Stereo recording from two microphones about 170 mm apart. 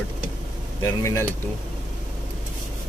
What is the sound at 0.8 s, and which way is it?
Speech, 15° left (ahead or behind).